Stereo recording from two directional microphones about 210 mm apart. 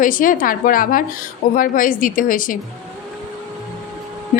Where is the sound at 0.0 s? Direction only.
40° left (ahead or behind).